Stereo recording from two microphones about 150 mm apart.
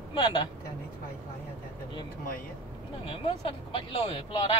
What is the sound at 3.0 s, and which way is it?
Speech, 40° left (ahead or behind).